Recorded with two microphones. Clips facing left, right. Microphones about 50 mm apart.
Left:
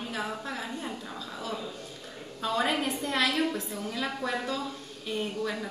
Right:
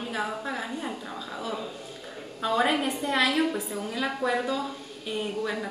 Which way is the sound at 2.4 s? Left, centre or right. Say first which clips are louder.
Right 3 dB; centre.